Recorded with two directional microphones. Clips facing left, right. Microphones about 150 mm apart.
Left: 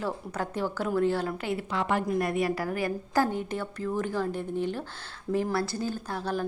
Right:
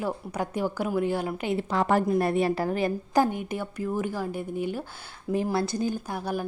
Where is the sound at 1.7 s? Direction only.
40° right (ahead or behind).